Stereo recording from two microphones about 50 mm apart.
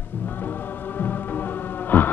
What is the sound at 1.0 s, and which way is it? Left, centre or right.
Music, left.